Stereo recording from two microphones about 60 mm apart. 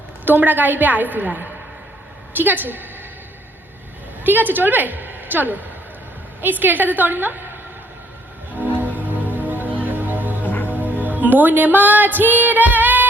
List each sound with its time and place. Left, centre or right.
0.3 s a woman's voice: right
4.2 s a woman's voice: right
8.6 s music: right
10.4 s music: left
10.8 s music: right